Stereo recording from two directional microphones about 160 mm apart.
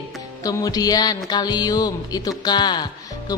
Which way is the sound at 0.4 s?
20° left (ahead or behind).